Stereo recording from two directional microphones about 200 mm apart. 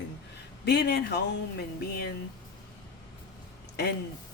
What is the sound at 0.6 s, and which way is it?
Speech, 55° left (ahead or behind).